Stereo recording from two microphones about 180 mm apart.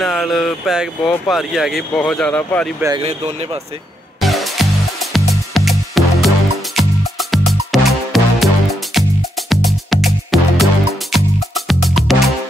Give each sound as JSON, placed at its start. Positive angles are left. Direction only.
{"t": 0.0, "sound": "speech", "side_deg": 0}
{"t": 3.0, "sound": "speech", "side_deg": -35}
{"t": 4.2, "sound": "music", "side_deg": 0}
{"t": 9.5, "sound": "music", "side_deg": 0}